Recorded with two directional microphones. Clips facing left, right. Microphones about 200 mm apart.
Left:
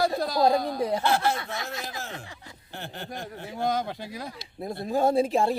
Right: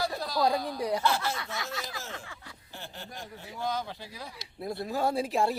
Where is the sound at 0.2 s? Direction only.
50° left (ahead or behind).